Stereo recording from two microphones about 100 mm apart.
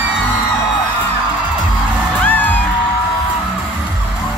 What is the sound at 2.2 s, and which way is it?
Music, 20° left (ahead or behind).